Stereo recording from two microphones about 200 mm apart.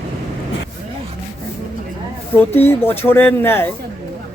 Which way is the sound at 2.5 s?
10° left (ahead or behind).